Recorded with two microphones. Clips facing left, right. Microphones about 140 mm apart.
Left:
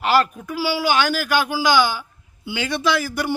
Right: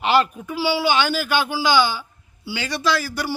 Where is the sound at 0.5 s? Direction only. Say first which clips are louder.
Even; 10° left (ahead or behind).